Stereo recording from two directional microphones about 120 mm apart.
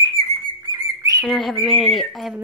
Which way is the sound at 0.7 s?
30° right (ahead or behind).